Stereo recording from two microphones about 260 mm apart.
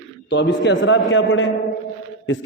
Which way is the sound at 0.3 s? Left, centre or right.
Left.